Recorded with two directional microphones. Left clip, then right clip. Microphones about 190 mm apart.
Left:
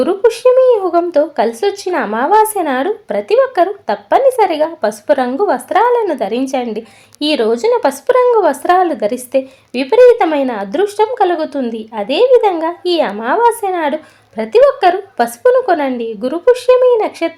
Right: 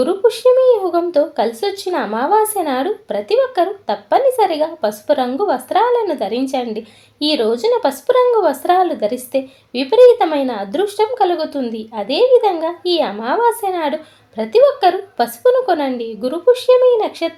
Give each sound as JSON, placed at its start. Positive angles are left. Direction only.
{"t": 0.0, "sound": "speech", "side_deg": 20}